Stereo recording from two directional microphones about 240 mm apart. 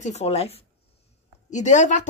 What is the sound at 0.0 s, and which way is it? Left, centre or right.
Speech, left.